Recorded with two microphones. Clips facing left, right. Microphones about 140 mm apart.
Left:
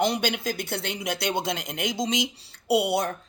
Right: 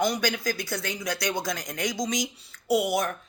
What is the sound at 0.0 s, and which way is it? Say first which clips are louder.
Speech: left 1 dB; 25° left (ahead or behind).